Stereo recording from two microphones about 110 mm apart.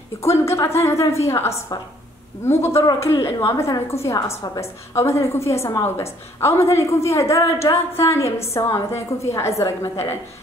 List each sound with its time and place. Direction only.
0.2 s a woman's voice: 25° left (ahead or behind)